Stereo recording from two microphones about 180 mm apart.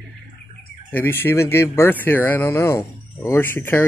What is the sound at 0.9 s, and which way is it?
Speech, 10° left (ahead or behind).